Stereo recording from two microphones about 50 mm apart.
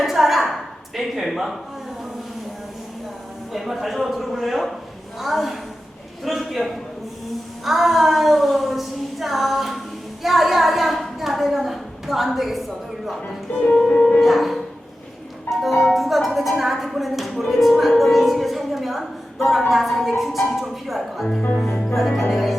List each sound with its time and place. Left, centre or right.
0.0 s a sound: centre
0.9 s a woman's voice: centre
3.5 s a woman's voice: centre
7.6 s a sound: centre
13.6 s music: centre
13.9 s speech: left
14.2 s speech: centre
15.4 s music: centre
16.0 s a woman's voice: centre